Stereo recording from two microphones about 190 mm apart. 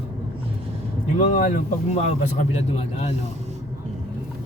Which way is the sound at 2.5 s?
35° left (ahead or behind).